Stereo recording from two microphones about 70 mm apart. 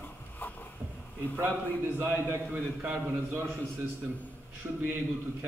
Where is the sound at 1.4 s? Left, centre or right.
Right.